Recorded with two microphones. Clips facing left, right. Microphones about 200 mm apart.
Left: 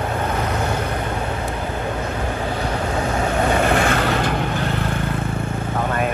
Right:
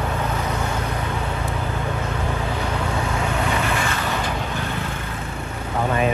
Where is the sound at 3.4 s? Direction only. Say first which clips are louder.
Left 6 dB; 50° left (ahead or behind).